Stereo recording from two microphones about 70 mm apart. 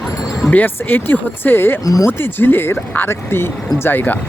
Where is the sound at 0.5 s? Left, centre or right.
Left.